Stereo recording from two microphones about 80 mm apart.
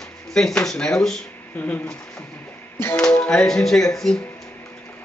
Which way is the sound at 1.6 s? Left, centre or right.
Left.